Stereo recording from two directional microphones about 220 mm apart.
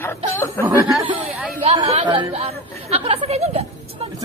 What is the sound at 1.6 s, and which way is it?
Speech, 25° right (ahead or behind).